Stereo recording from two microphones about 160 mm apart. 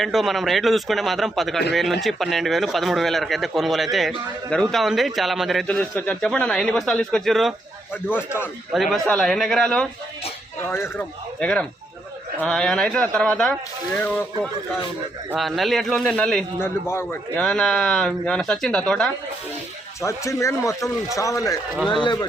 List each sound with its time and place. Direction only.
0.0 s a man's voice: centre (ahead or behind)
8.1 s speech: 15° left (ahead or behind)
8.7 s a man's voice: centre (ahead or behind)
10.6 s a man's voice: 15° left (ahead or behind)
15.4 s a man's voice: centre (ahead or behind)
16.6 s speech: 15° left (ahead or behind)
17.4 s a man's voice: 5° left (ahead or behind)
20.0 s speech: 20° left (ahead or behind)